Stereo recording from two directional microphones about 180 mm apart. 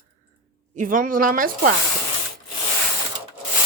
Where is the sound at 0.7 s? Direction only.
50° right (ahead or behind).